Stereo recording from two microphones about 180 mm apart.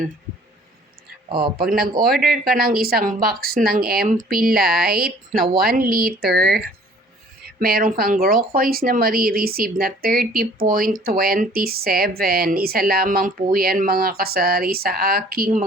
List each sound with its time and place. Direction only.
1.5 s speech: 55° right (ahead or behind)
2.1 s speech: centre (ahead or behind)
2.4 s speech: 55° right (ahead or behind)